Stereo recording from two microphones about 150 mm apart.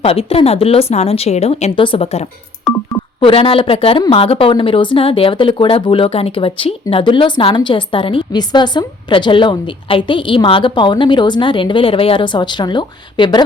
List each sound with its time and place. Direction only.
0.0 s a woman's voice: 40° left (ahead or behind)